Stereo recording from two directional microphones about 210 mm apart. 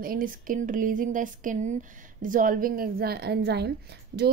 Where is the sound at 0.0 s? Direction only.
45° right (ahead or behind).